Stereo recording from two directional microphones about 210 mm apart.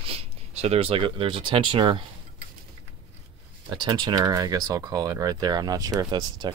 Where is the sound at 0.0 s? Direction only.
30° right (ahead or behind).